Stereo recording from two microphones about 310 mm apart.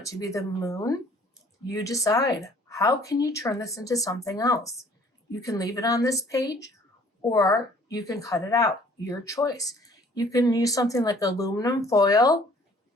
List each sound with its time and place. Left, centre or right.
0.1 s speech: centre